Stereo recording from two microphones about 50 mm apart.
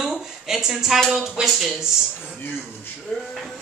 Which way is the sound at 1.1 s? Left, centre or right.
Centre.